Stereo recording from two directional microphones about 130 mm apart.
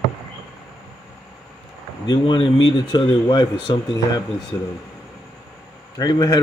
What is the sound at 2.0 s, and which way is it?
Speech, 35° left (ahead or behind).